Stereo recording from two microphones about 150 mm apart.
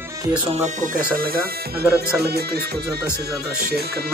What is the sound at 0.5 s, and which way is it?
Speech, 55° right (ahead or behind).